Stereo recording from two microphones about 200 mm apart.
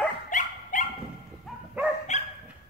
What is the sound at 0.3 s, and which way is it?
Dog, 40° left (ahead or behind).